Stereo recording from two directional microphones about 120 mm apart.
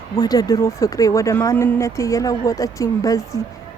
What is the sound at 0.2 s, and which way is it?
A woman's voice, 30° left (ahead or behind).